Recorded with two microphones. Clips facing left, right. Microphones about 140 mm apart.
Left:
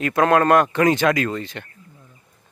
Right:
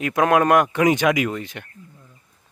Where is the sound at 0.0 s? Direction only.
10° right (ahead or behind).